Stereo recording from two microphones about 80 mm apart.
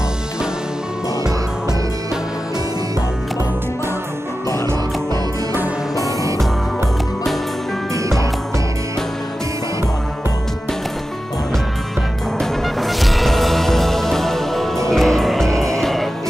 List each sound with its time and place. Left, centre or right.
7.9 s music: right
12.4 s music: centre